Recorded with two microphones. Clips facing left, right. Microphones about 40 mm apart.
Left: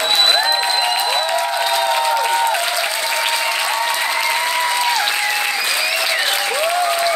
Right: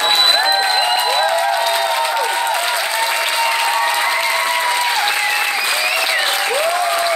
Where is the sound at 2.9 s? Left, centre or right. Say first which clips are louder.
Right 2 dB; right.